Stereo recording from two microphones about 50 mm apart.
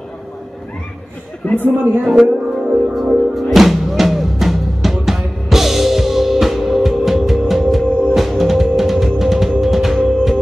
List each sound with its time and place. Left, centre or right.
1.4 s a man's voice: left
2.0 s music: centre